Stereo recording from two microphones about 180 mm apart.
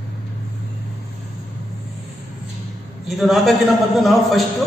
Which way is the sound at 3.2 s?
Centre (ahead or behind).